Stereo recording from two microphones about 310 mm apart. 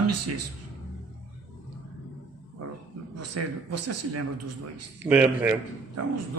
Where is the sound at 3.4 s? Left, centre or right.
Right.